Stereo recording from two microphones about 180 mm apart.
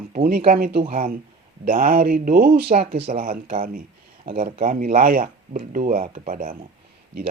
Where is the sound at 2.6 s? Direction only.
35° right (ahead or behind).